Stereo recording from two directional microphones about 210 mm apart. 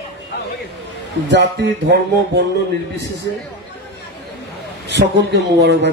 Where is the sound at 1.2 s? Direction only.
55° right (ahead or behind).